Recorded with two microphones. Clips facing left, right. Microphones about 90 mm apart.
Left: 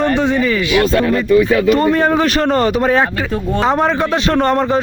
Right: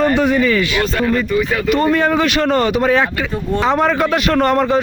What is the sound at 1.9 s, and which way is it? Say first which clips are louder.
A man's voice: left 1 dB; 35° left (ahead or behind).